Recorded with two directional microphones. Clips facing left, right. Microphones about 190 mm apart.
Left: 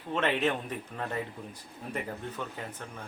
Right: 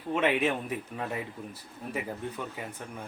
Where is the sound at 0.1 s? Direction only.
10° right (ahead or behind).